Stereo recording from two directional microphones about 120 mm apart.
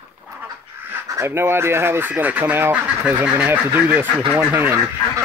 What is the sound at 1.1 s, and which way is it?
Speech, 20° right (ahead or behind).